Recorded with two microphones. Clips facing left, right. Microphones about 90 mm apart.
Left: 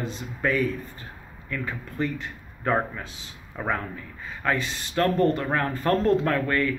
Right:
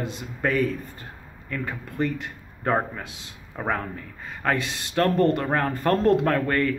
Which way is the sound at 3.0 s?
65° right (ahead or behind).